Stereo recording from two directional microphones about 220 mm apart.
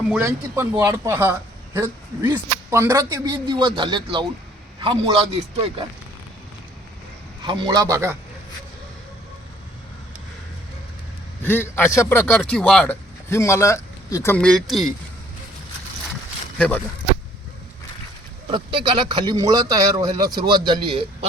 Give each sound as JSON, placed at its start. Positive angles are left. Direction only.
{"t": 0.1, "sound": "a man's voice", "side_deg": -10}
{"t": 7.4, "sound": "a man's voice", "side_deg": -20}
{"t": 11.4, "sound": "a man's voice", "side_deg": 10}
{"t": 16.6, "sound": "a man's voice", "side_deg": 5}
{"t": 18.5, "sound": "speech", "side_deg": -20}